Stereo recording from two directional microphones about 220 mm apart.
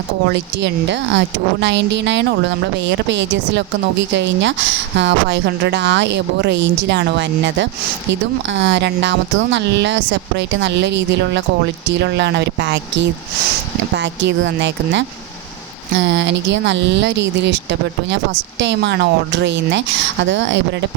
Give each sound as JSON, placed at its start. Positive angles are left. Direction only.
{"t": 0.3, "sound": "speech", "side_deg": -55}